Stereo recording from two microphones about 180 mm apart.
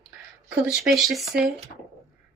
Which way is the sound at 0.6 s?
Centre (ahead or behind).